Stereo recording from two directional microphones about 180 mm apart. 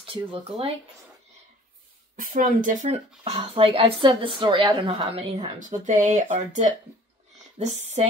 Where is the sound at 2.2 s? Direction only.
45° right (ahead or behind).